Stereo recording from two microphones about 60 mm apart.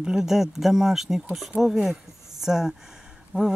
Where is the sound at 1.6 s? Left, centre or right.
Centre.